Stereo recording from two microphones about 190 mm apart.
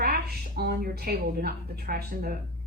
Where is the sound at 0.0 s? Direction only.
55° right (ahead or behind).